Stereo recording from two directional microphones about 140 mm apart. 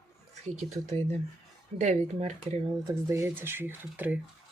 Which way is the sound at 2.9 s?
20° right (ahead or behind).